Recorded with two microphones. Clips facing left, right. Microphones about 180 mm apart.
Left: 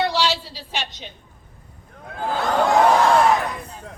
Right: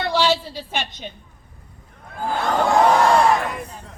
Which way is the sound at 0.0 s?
50° right (ahead or behind).